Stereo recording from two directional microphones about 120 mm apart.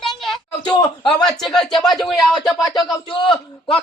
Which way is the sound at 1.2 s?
5° left (ahead or behind).